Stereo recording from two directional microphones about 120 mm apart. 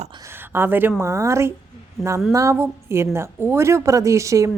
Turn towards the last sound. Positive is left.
turn(degrees=-25)  # may be behind; listen again after turning